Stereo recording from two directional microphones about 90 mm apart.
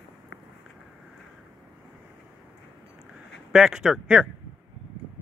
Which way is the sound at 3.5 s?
5° right (ahead or behind).